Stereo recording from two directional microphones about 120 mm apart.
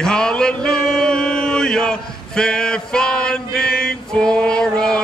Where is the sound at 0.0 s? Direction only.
5° left (ahead or behind).